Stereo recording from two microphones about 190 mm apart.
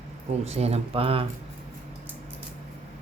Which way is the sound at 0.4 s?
35° right (ahead or behind).